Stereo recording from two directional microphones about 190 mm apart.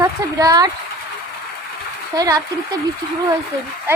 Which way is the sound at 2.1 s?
20° right (ahead or behind).